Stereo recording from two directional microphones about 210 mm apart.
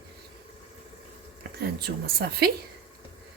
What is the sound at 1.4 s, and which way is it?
Speech, 50° right (ahead or behind).